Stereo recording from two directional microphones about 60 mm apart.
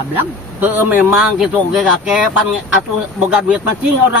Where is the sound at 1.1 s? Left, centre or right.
Centre.